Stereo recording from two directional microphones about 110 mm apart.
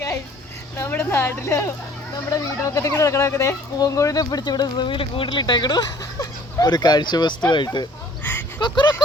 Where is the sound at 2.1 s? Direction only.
30° left (ahead or behind).